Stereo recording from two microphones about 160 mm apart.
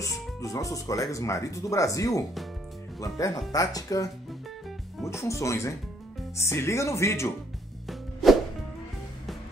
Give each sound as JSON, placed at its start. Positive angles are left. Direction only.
{"t": 0.0, "sound": "music", "side_deg": 20}
{"t": 1.1, "sound": "speech", "side_deg": 20}
{"t": 4.3, "sound": "music", "side_deg": 0}
{"t": 5.1, "sound": "speech", "side_deg": 20}
{"t": 7.8, "sound": "music", "side_deg": 0}